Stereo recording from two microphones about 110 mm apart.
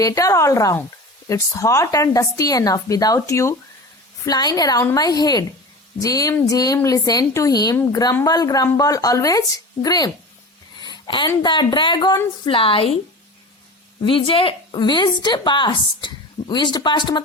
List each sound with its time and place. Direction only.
0.0 s speech: 30° left (ahead or behind)
10.8 s a sound: 40° left (ahead or behind)
11.4 s a woman's voice: 45° left (ahead or behind)
14.0 s a woman's voice: 55° left (ahead or behind)